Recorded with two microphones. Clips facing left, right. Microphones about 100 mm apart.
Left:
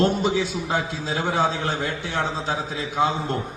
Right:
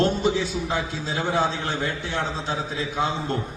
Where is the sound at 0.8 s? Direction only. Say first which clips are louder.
Left 1 dB; 35° left (ahead or behind).